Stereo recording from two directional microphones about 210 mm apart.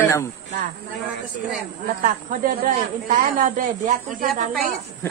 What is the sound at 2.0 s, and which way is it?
Speech, 40° right (ahead or behind).